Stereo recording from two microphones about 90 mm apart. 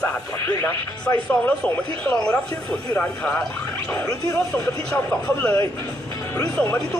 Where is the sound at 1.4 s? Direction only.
15° left (ahead or behind).